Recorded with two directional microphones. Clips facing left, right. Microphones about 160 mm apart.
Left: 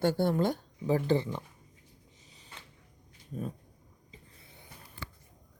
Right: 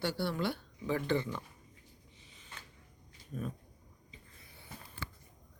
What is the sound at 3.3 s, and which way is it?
Speech, 30° left (ahead or behind).